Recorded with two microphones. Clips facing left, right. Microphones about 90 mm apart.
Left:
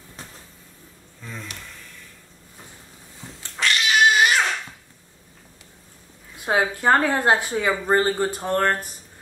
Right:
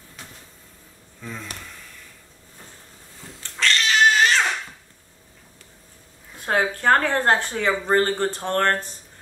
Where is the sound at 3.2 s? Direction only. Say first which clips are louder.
Right 1 dB; 20° left (ahead or behind).